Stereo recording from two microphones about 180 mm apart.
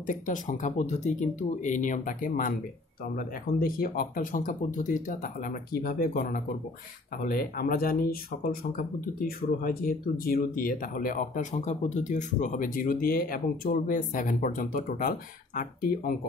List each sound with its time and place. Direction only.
0.0 s speech: 45° left (ahead or behind)